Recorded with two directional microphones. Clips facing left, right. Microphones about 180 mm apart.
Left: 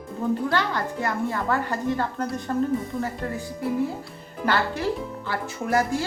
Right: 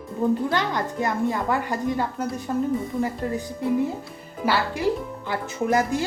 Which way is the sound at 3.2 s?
20° right (ahead or behind).